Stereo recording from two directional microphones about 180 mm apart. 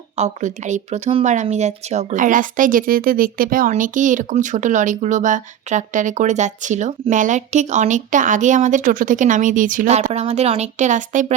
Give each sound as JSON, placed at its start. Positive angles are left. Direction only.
{"t": 0.2, "sound": "speech", "side_deg": -40}